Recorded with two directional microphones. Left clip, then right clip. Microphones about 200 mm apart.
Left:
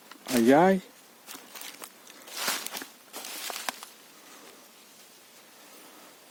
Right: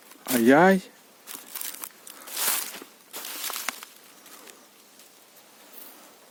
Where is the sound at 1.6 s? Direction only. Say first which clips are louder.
Right 3 dB; 15° right (ahead or behind).